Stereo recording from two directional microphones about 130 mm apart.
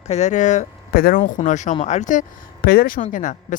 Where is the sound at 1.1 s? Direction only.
90° left.